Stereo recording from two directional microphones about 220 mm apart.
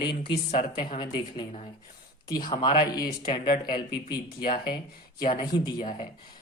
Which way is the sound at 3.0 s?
40° left (ahead or behind).